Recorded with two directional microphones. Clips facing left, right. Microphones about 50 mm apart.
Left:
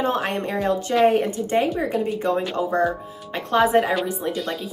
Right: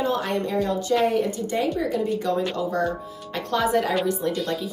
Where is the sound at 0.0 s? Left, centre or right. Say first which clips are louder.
Left 1 dB; left.